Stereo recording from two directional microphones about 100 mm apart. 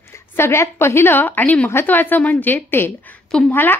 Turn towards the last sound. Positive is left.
turn(degrees=20)  # may be behind; listen again after turning